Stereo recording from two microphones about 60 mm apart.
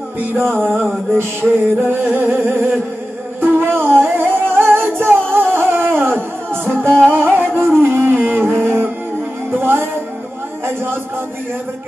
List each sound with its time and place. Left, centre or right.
0.6 s music: right
6.7 s music: centre
7.1 s music: right
7.8 s a sound: right
8.5 s music: centre
9.5 s music: right